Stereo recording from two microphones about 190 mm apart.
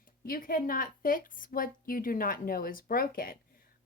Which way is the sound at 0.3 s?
50° left (ahead or behind).